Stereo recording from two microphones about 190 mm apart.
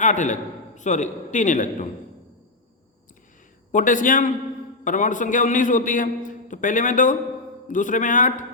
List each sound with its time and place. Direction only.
0.0 s a man's voice: 40° left (ahead or behind)
3.7 s a man's voice: 45° left (ahead or behind)